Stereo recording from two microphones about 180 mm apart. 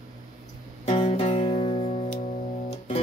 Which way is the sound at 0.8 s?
35° left (ahead or behind).